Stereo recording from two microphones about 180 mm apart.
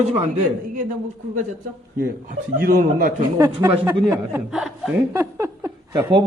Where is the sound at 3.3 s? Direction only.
20° right (ahead or behind); by 5.0 s 5° right (ahead or behind).